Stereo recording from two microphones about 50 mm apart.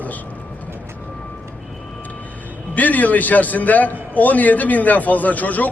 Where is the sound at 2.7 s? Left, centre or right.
Left.